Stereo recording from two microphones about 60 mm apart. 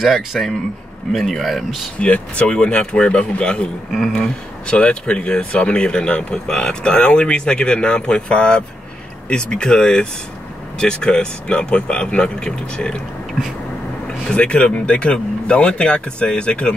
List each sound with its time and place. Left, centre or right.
0.0 s speech: centre
2.0 s speech: left
3.9 s speech: centre
4.6 s speech: centre
14.0 s speech: centre